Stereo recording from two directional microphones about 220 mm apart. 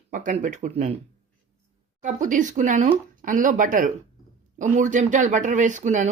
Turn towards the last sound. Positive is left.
turn(degrees=-35)  # may be behind; listen again after turning